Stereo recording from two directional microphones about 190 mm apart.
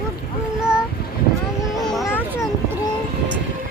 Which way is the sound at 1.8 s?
Centre (ahead or behind).